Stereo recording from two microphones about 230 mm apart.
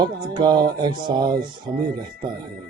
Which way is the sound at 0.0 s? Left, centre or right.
Centre.